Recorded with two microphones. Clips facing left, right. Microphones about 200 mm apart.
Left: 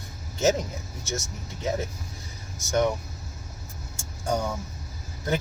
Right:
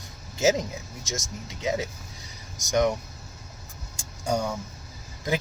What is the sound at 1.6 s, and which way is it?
Speech, 15° right (ahead or behind).